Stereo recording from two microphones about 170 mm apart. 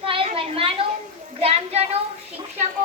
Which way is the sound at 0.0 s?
30° right (ahead or behind).